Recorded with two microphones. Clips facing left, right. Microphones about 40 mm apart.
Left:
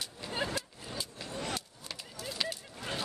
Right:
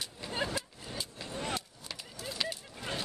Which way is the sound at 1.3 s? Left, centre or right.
Right.